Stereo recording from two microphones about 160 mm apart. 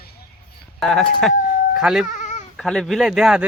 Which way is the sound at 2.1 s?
45° left (ahead or behind).